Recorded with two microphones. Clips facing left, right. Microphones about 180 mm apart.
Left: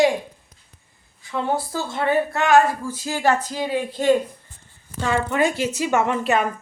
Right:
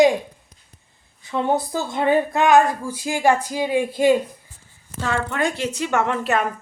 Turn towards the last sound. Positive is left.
turn(degrees=0)  # may be behind; listen again after turning